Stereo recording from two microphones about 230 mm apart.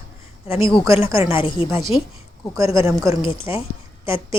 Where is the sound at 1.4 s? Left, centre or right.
Left.